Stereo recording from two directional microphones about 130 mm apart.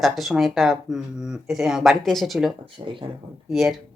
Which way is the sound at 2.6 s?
40° right (ahead or behind).